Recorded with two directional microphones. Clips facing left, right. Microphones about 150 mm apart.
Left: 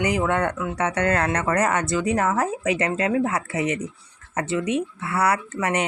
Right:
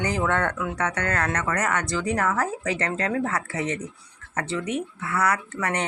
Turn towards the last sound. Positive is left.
turn(degrees=20)  # may be behind; listen again after turning